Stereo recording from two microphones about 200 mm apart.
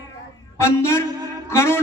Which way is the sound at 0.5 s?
15° left (ahead or behind).